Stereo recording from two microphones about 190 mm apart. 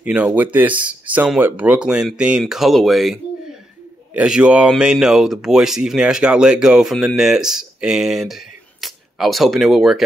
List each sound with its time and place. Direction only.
0.0 s speech: 10° right (ahead or behind)